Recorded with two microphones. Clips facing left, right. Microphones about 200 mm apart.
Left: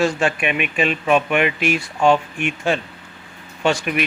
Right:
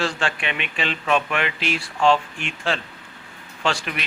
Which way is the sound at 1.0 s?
15° left (ahead or behind).